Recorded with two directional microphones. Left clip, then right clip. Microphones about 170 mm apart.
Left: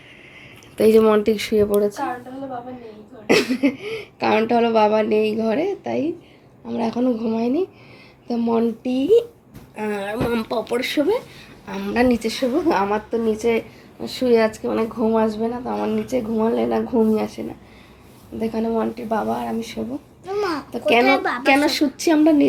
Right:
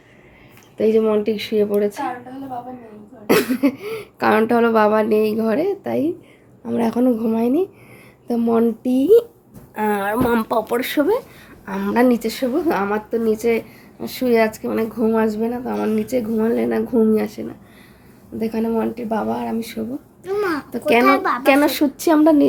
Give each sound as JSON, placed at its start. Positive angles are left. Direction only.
{"t": 0.8, "sound": "a woman's voice", "side_deg": 5}
{"t": 3.2, "sound": "speech", "side_deg": -10}
{"t": 6.7, "sound": "a woman's voice", "side_deg": -30}
{"t": 11.6, "sound": "speech", "side_deg": -20}
{"t": 20.2, "sound": "babbling", "side_deg": -50}
{"t": 20.7, "sound": "speech", "side_deg": -25}
{"t": 21.0, "sound": "a woman's voice", "side_deg": -65}
{"t": 21.4, "sound": "speech", "side_deg": -20}